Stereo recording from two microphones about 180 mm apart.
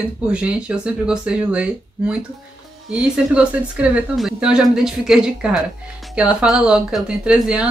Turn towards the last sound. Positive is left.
turn(degrees=-5)  # may be behind; listen again after turning